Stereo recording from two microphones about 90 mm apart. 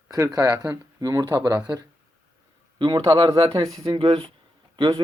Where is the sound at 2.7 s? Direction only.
55° right (ahead or behind).